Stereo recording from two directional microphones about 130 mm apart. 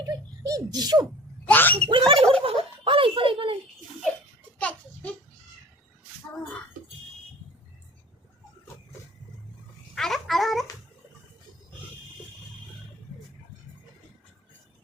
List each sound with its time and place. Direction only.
0.0 s a sound: 30° right (ahead or behind)
1.5 s speech: 10° left (ahead or behind)
1.9 s speech: 45° right (ahead or behind)
2.1 s speech: 5° left (ahead or behind)
2.4 s speech: 45° right (ahead or behind)
4.5 s a sound: 10° left (ahead or behind)
9.9 s babbling: centre (ahead or behind)